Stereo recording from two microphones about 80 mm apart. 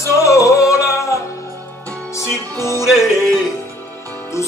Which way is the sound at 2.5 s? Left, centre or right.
Left.